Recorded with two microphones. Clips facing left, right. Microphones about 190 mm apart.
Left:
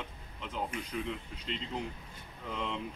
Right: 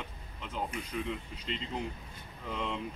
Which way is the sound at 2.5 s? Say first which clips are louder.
Right 1 dB; centre (ahead or behind).